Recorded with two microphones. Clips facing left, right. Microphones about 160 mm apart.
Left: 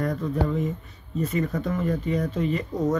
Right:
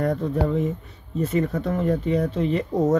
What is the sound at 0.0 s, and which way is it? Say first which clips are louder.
Speech: right 3 dB; 35° right (ahead or behind).